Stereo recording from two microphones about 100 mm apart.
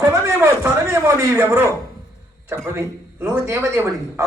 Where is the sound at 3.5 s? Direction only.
25° right (ahead or behind).